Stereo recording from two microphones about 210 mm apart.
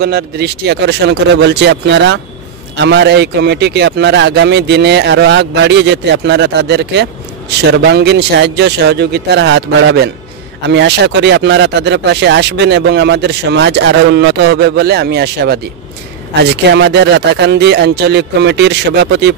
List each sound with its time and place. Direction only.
0.0 s speech: 50° right (ahead or behind)